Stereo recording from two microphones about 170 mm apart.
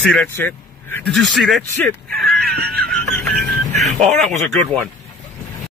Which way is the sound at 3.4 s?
45° right (ahead or behind).